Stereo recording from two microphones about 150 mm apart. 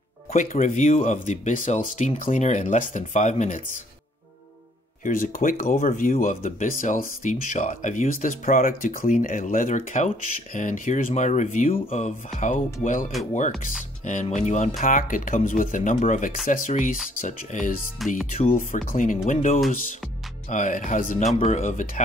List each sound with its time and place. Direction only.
0.3 s speech: 55° left (ahead or behind)
5.0 s speech: 65° left (ahead or behind)
11.7 s speech: 45° left (ahead or behind)
12.3 s speech: centre (ahead or behind)
14.0 s speech: 55° left (ahead or behind)
17.9 s speech: centre (ahead or behind)
18.5 s speech: 60° left (ahead or behind)
21.4 s speech: 50° left (ahead or behind)